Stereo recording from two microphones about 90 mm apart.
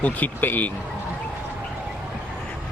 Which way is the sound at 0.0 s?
15° left (ahead or behind).